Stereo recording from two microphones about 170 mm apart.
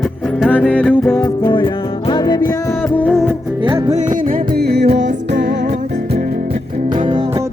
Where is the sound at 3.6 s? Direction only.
35° right (ahead or behind); by 5.5 s 80° right.